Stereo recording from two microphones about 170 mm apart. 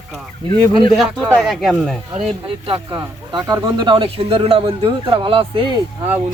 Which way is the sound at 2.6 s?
30° right (ahead or behind).